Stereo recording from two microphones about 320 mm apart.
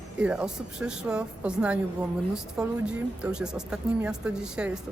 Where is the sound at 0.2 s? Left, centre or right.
Centre.